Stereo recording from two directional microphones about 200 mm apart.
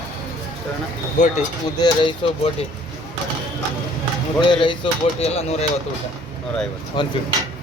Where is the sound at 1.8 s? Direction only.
25° left (ahead or behind).